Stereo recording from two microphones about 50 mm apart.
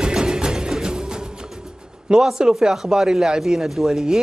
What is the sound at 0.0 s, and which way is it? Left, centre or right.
Music, centre.